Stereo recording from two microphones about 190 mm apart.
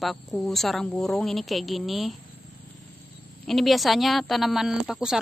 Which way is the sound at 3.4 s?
Centre (ahead or behind).